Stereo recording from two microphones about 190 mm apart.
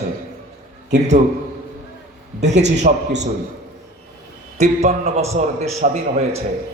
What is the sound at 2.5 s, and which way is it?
Speech, 35° right (ahead or behind).